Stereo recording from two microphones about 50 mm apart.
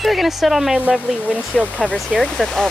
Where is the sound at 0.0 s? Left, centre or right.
Centre.